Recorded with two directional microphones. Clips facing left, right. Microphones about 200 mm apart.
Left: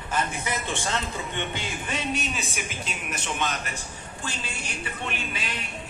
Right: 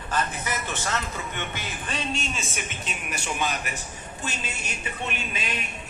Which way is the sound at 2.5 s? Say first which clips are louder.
Left 1 dB; 5° right (ahead or behind).